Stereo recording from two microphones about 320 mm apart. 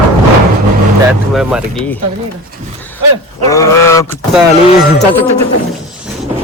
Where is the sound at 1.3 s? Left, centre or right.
Centre.